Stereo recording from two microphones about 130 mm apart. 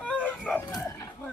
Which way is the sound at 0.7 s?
25° left (ahead or behind).